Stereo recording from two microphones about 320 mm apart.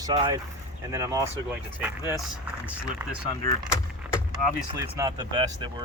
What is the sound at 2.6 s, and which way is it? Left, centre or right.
Speech, centre.